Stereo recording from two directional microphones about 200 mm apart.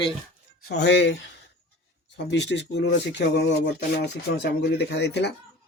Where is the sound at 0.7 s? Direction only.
60° left (ahead or behind).